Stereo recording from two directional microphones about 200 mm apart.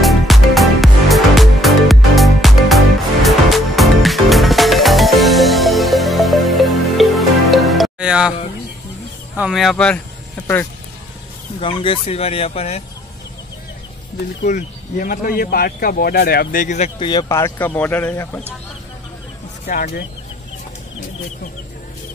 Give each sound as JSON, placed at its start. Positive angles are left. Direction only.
{"t": 0.0, "sound": "music", "side_deg": 0}
{"t": 9.4, "sound": "speech", "side_deg": 0}
{"t": 11.6, "sound": "speech", "side_deg": 25}
{"t": 14.1, "sound": "speech", "side_deg": 40}
{"t": 17.0, "sound": "speech", "side_deg": 20}
{"t": 19.6, "sound": "speech", "side_deg": 45}